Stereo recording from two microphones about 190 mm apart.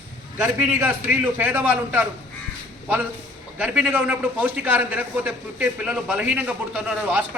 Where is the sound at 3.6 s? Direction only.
5° right (ahead or behind).